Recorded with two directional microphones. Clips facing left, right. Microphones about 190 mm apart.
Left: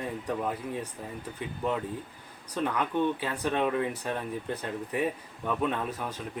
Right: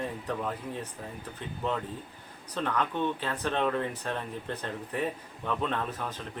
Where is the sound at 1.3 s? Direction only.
10° left (ahead or behind).